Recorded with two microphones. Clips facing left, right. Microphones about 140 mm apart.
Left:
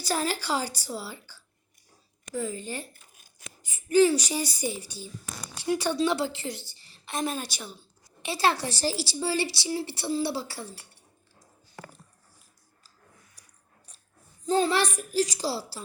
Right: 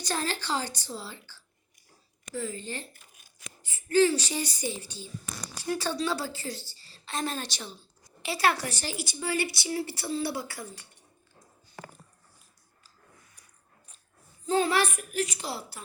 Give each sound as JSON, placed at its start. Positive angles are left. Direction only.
{"t": 0.0, "sound": "a woman's voice", "side_deg": 10}
{"t": 8.2, "sound": "speech", "side_deg": 25}
{"t": 14.4, "sound": "a child's voice", "side_deg": 35}